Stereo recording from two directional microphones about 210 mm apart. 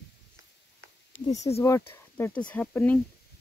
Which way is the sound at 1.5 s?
20° left (ahead or behind).